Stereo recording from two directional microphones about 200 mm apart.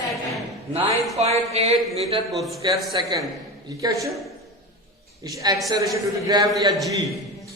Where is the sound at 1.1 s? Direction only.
30° right (ahead or behind).